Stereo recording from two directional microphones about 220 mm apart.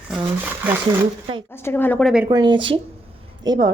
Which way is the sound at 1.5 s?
10° left (ahead or behind).